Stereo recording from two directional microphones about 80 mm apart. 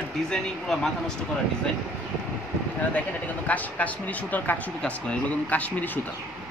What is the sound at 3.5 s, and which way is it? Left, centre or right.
Speech, centre.